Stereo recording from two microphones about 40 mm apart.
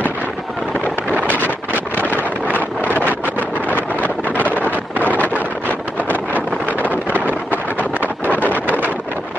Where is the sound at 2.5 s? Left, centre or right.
Right.